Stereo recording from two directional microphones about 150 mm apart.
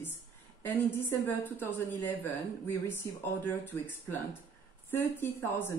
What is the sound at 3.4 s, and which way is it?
A woman's voice, 10° left (ahead or behind).